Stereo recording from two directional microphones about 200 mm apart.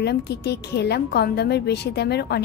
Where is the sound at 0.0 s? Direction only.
55° left (ahead or behind).